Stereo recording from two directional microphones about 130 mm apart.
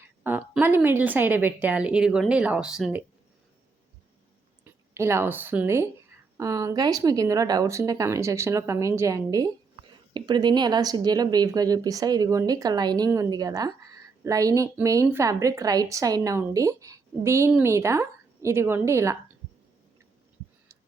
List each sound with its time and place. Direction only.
0.2 s a woman's voice: 15° right (ahead or behind)
4.6 s a woman's voice: 20° right (ahead or behind)